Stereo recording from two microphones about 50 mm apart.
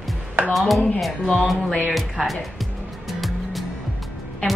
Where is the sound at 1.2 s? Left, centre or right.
Left.